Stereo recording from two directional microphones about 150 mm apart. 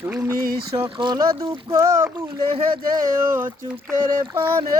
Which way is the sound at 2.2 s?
30° right (ahead or behind).